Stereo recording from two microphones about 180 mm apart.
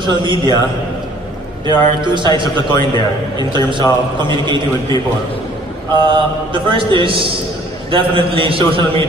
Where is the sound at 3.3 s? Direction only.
25° right (ahead or behind).